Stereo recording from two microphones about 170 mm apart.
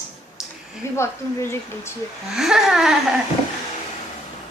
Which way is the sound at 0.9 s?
15° left (ahead or behind).